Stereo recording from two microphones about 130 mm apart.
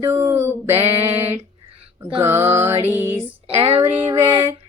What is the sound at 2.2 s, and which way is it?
Music, 20° right (ahead or behind).